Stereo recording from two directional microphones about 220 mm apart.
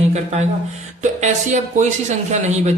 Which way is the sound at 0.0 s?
30° right (ahead or behind).